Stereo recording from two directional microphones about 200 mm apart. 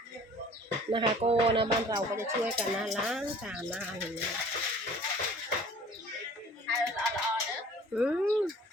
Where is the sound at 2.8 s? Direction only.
5° right (ahead or behind).